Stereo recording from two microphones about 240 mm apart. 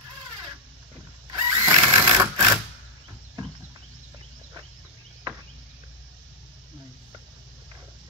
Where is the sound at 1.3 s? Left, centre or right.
Centre.